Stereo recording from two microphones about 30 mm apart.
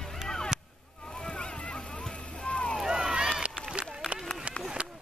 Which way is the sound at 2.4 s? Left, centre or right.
Left.